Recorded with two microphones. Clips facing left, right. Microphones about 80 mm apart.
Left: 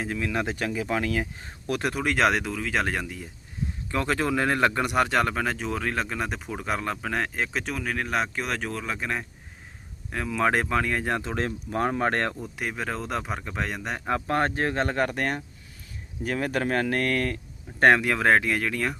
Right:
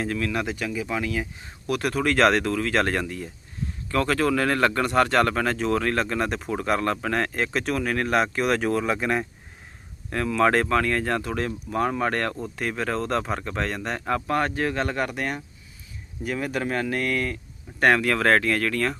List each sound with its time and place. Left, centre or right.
0.0 s speech: centre
0.5 s speech: left
1.7 s speech: left
3.9 s speech: left; by 9.2 s centre
10.1 s speech: centre; by 12.3 s left
12.5 s speech: centre
14.3 s speech: left
17.8 s speech: left